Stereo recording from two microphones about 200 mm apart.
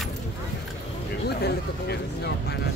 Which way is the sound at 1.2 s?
55° left (ahead or behind).